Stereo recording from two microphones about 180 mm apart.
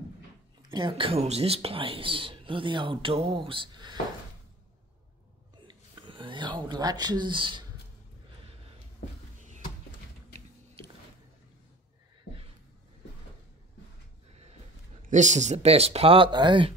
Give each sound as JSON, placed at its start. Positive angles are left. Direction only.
{"t": 0.6, "sound": "speech", "side_deg": -25}
{"t": 5.7, "sound": "a sound", "side_deg": -25}
{"t": 15.0, "sound": "speech", "side_deg": -40}